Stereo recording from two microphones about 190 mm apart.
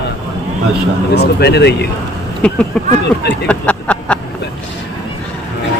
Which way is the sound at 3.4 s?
5° left (ahead or behind).